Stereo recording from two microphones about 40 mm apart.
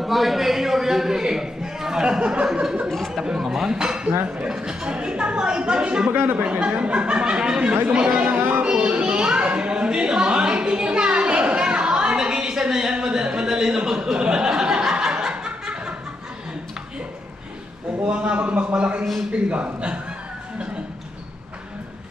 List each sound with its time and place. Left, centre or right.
0.0 s a man's voice: centre; by 8.4 s right
8.4 s music: right
8.6 s a sound: right
18.2 s speech: right